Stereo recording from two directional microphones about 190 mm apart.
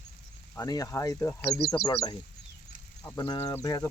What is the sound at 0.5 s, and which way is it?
Speech, 20° left (ahead or behind).